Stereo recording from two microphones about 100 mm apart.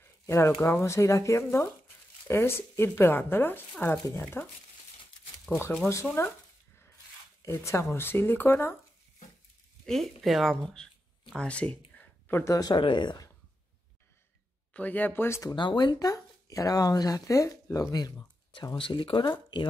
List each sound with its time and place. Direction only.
0.0 s speech: 25° left (ahead or behind)
7.4 s speech: 25° left (ahead or behind)
10.2 s speech: centre (ahead or behind); by 12.5 s 20° left (ahead or behind)
12.7 s speech: 50° left (ahead or behind)
14.7 s speech: 15° left (ahead or behind)
15.5 s speech: 50° left (ahead or behind)